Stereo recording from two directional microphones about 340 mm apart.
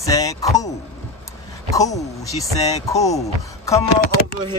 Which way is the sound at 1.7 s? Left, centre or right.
Centre.